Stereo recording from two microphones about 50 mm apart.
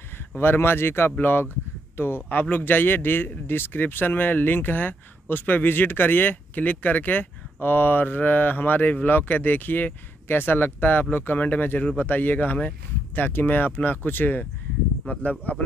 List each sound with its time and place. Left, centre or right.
0.4 s speech: left